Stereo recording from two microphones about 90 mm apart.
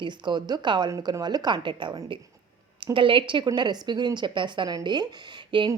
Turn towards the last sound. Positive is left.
turn(degrees=-60)  # may be behind; listen again after turning